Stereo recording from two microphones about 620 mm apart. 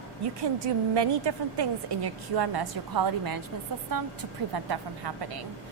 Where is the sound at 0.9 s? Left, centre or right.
Right.